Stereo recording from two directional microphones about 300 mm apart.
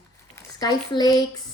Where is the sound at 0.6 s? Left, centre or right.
Centre.